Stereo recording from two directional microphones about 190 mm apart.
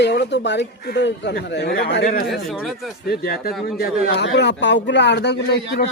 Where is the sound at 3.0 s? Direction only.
55° left (ahead or behind).